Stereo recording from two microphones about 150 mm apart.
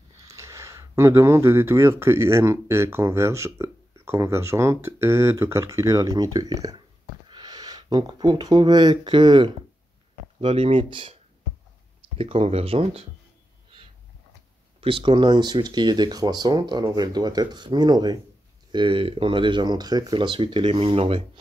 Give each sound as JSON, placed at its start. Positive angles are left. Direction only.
{"t": 0.3, "sound": "speech", "side_deg": -20}
{"t": 12.2, "sound": "speech", "side_deg": -40}
{"t": 14.8, "sound": "speech", "side_deg": -35}